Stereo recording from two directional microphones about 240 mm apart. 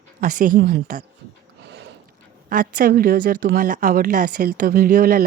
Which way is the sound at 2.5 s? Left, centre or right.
Right.